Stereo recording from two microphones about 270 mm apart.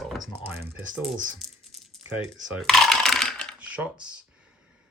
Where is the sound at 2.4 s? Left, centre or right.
Centre.